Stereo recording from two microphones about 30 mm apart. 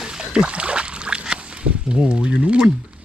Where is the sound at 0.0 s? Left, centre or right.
Right.